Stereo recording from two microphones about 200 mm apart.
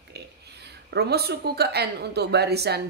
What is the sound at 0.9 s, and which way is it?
Speech, 55° right (ahead or behind).